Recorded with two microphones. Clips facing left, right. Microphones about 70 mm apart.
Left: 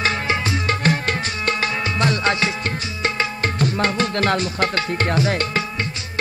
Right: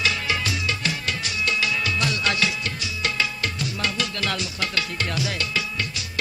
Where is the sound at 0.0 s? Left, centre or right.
Left.